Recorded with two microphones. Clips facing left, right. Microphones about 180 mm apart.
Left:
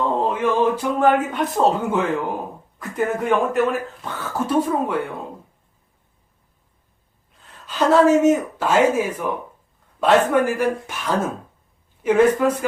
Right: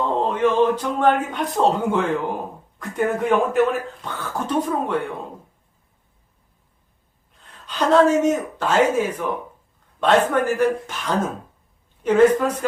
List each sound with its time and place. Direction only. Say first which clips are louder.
0.3 s speech: right 3 dB; 10° left (ahead or behind)
7.7 s speech: left 1 dB; 5° left (ahead or behind)